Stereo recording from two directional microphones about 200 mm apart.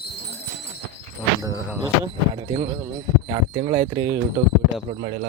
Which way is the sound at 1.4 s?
10° right (ahead or behind).